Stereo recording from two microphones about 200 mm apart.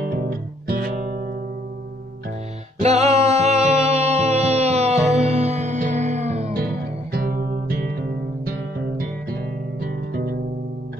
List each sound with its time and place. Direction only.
0.0 s music: 45° right (ahead or behind)
2.8 s music: 30° right (ahead or behind)
6.5 s music: 50° right (ahead or behind)